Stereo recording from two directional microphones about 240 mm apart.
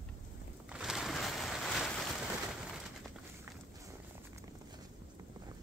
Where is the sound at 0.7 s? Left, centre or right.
Centre.